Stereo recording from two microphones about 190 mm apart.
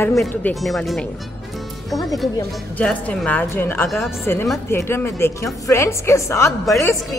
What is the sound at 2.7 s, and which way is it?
Speech, 5° left (ahead or behind).